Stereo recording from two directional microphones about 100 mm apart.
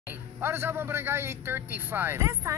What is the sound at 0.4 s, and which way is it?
Speech, 25° right (ahead or behind).